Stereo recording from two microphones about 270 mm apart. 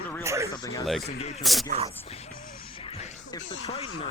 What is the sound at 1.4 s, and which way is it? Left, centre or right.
Speech, centre.